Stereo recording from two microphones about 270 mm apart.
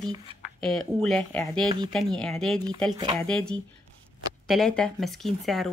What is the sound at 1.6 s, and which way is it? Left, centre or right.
Speech, centre.